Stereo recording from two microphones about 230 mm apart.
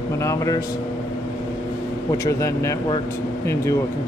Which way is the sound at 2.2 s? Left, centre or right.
Centre.